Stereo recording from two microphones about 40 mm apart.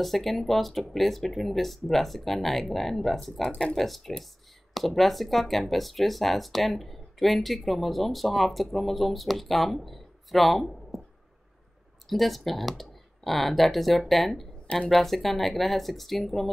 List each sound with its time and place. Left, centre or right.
0.0 s speech: centre
3.4 s speech: centre
3.7 s speech: centre
12.1 s speech: centre